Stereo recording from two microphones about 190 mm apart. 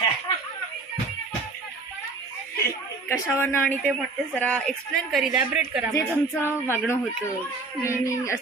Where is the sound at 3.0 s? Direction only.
10° left (ahead or behind).